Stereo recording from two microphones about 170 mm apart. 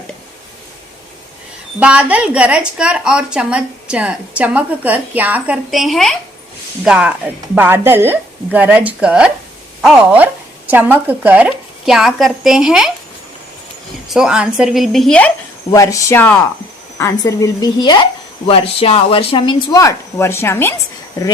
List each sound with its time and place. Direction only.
1.8 s a woman's voice: 5° right (ahead or behind)
14.1 s speech: 5° right (ahead or behind)
15.7 s a woman's voice: 20° left (ahead or behind)
19.6 s speech: 20° left (ahead or behind)